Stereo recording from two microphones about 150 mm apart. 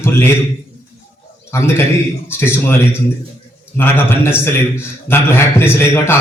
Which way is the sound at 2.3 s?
15° left (ahead or behind).